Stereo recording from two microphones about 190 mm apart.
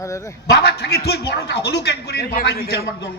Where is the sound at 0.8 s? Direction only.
55° left (ahead or behind).